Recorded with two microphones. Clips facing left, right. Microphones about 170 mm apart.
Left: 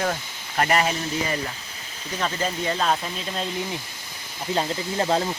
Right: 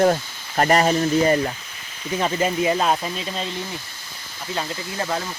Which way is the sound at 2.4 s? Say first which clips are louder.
Right 5 dB; 10° right (ahead or behind).